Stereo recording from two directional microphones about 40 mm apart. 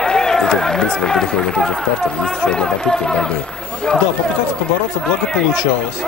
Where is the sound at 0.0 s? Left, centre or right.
Centre.